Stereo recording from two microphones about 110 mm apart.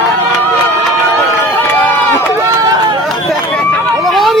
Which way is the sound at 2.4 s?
40° right (ahead or behind).